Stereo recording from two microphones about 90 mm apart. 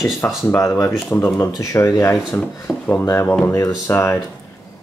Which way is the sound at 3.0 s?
30° left (ahead or behind).